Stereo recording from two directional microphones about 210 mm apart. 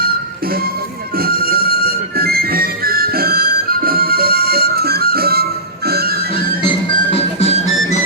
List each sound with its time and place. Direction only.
1.1 s music: 45° right (ahead or behind)
7.1 s music: 30° left (ahead or behind)